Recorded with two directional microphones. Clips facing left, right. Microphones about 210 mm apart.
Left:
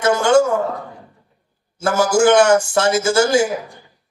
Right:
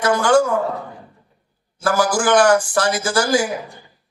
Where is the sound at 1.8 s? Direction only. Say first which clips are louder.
Left 4 dB; 25° left (ahead or behind).